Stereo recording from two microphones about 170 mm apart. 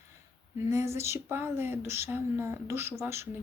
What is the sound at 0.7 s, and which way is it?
Speech, 15° right (ahead or behind).